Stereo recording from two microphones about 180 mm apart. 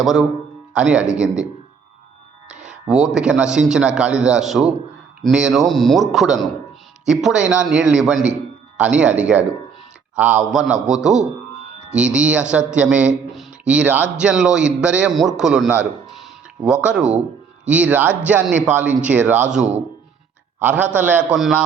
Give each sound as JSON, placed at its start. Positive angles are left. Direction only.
{"t": 0.0, "sound": "a man's voice", "side_deg": 0}
{"t": 2.9, "sound": "a man's voice", "side_deg": -5}